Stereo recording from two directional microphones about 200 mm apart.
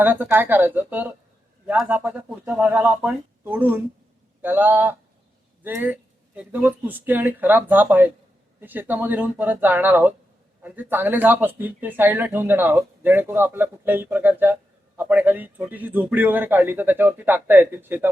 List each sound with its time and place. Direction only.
0.0 s speech: 10° right (ahead or behind)